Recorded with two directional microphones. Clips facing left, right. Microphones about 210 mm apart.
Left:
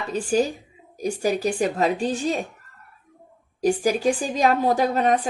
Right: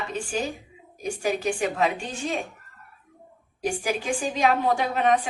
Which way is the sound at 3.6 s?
40° left (ahead or behind).